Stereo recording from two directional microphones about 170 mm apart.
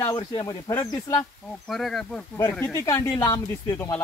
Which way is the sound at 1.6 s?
Centre (ahead or behind).